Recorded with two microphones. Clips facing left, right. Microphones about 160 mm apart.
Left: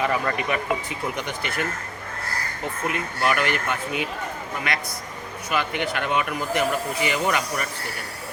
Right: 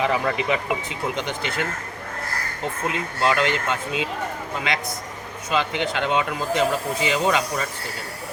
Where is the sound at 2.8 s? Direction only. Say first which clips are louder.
Right 2 dB; 20° right (ahead or behind).